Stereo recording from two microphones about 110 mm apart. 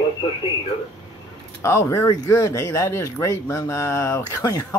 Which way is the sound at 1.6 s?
25° left (ahead or behind).